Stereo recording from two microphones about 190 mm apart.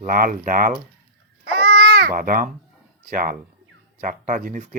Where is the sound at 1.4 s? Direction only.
60° right (ahead or behind).